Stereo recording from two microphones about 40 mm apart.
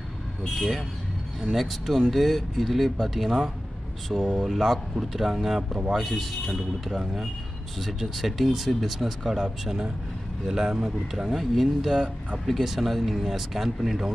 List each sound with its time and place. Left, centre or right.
0.4 s speech: centre
1.4 s speech: centre
4.2 s speech: right
4.5 s speech: centre